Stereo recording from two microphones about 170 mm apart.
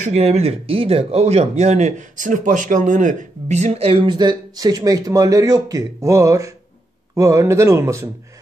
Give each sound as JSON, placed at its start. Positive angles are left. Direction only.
{"t": 0.0, "sound": "speech", "side_deg": -40}